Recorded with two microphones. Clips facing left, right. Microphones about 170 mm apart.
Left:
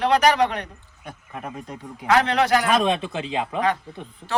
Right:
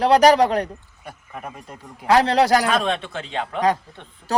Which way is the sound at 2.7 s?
Centre (ahead or behind).